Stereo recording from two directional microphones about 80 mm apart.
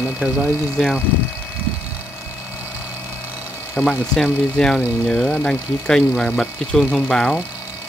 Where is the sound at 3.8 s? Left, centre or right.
Centre.